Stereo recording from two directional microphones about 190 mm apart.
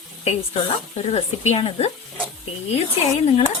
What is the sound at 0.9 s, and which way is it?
Speech, 35° left (ahead or behind).